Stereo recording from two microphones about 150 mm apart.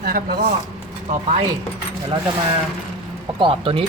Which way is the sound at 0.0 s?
90° right.